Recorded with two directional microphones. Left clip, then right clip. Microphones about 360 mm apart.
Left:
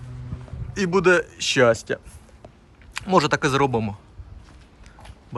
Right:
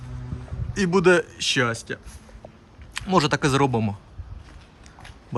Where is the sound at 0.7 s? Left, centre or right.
Centre.